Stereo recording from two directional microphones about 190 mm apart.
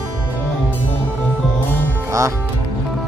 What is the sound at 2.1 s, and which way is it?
Speech, 15° right (ahead or behind).